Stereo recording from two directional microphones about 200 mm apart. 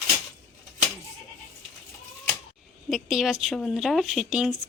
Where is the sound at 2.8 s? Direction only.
Centre (ahead or behind).